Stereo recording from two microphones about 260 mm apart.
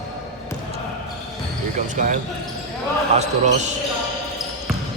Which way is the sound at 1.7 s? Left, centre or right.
Right.